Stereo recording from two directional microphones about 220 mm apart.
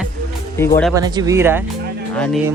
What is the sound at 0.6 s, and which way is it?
Speech, 10° left (ahead or behind).